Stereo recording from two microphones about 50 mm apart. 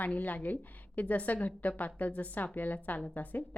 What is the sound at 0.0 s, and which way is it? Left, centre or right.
A woman's voice, left.